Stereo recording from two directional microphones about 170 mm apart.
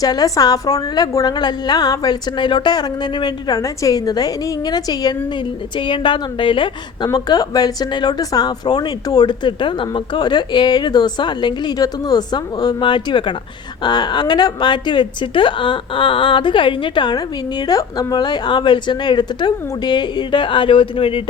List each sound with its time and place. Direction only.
0.0 s a woman's voice: 20° left (ahead or behind)